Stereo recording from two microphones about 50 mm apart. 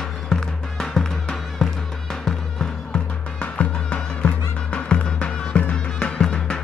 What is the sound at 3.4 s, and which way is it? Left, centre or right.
Music, left.